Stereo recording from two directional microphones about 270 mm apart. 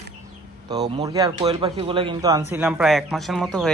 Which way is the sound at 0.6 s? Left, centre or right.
Centre.